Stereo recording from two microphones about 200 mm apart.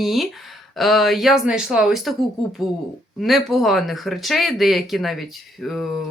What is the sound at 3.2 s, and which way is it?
Speech, centre (ahead or behind).